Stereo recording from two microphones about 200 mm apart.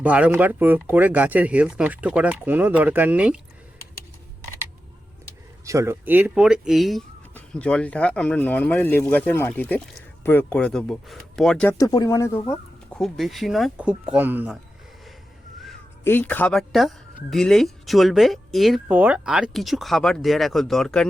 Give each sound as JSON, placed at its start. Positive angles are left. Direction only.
{"t": 0.0, "sound": "speech", "side_deg": -5}
{"t": 5.6, "sound": "speech", "side_deg": -15}
{"t": 11.8, "sound": "speech", "side_deg": 15}
{"t": 12.5, "sound": "speech", "side_deg": 5}
{"t": 15.6, "sound": "speech", "side_deg": 5}